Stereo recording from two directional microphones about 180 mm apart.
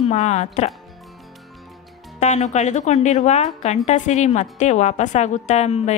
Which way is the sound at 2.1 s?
40° left (ahead or behind).